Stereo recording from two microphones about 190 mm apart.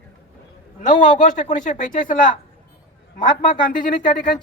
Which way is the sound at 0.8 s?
40° left (ahead or behind).